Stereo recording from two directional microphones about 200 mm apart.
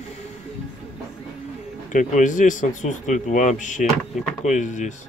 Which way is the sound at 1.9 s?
40° left (ahead or behind).